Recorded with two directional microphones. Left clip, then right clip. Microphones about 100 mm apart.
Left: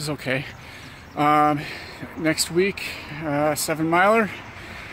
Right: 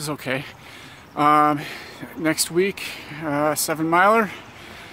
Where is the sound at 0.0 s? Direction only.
20° right (ahead or behind).